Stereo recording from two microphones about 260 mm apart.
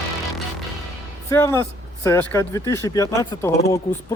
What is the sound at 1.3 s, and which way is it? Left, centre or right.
Speech, centre.